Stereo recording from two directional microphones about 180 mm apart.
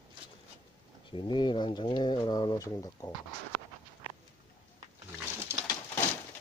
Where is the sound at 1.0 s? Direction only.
25° left (ahead or behind).